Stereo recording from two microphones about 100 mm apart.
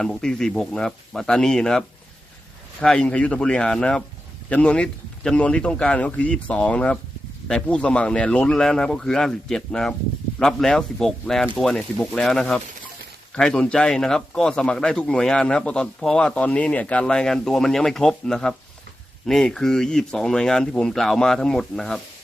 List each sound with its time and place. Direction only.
0.0 s speech: 5° left (ahead or behind)
2.8 s a man's voice: 10° left (ahead or behind)